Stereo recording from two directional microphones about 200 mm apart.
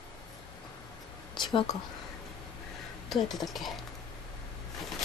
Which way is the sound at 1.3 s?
25° left (ahead or behind).